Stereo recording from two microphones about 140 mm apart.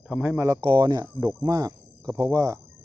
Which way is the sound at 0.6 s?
35° right (ahead or behind).